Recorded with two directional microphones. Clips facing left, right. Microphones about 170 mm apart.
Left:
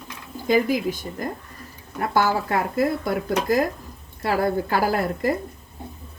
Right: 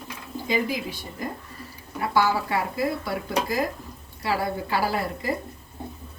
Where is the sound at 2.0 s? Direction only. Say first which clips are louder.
Left 1 dB; 50° left (ahead or behind).